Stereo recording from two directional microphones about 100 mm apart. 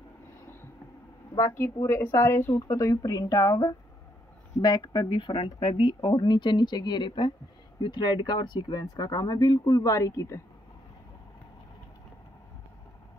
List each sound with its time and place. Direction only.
1.4 s speech: 25° left (ahead or behind)